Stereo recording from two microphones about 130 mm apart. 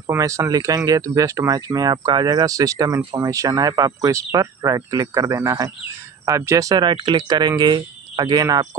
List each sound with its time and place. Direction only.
0.1 s speech: 25° right (ahead or behind)